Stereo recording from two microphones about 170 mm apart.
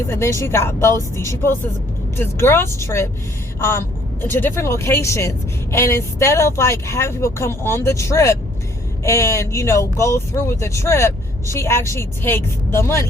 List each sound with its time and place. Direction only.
0.1 s speech: 15° left (ahead or behind)